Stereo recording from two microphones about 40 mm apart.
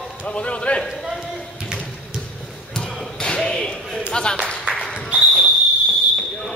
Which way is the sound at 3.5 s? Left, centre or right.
Centre.